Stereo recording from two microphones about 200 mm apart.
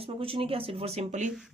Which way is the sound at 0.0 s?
30° right (ahead or behind).